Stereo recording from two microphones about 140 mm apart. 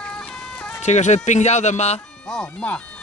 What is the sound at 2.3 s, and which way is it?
Speech, 5° left (ahead or behind).